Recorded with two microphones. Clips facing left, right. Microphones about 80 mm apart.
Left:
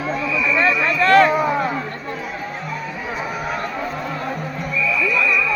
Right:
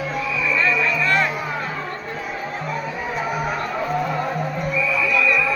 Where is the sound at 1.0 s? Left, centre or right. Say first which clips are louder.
Left 10 dB; left.